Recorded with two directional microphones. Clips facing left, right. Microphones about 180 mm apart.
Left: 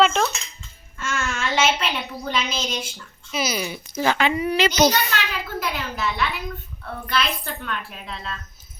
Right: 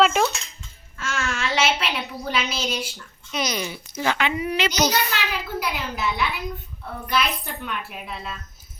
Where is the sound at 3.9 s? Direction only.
40° left (ahead or behind).